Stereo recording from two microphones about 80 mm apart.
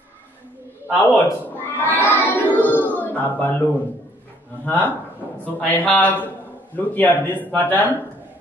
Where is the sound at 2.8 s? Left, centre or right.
Left.